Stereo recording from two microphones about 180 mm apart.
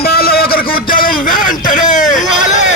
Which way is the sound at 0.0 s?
60° left (ahead or behind).